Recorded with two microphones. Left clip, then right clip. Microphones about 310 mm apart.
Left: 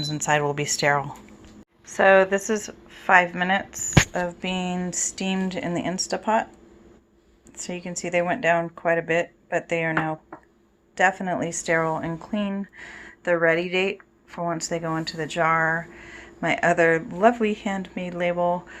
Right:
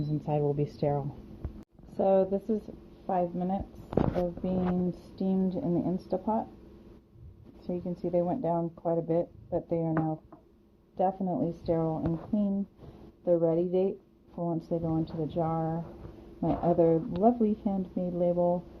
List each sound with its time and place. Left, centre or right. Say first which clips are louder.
0.0 s speech: left 8 dB; left
2.0 s speech: left 9 dB; left
3.2 s speech: left 10 dB; left
5.2 s speech: even; left
7.7 s speech: left 4 dB; left
13.6 s speech: left 4 dB; left
14.3 s speech: left 6 dB; left
15.0 s speech: left 6 dB; left
15.4 s speech: left 12 dB; left
18.3 s speech: left 6 dB; left